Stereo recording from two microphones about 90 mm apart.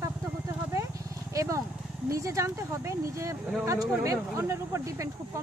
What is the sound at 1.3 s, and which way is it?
Speech, 35° right (ahead or behind).